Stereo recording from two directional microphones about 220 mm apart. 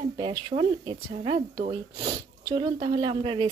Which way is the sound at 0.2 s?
25° right (ahead or behind).